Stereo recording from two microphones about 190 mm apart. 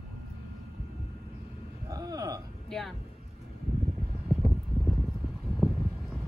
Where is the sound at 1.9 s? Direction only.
20° right (ahead or behind).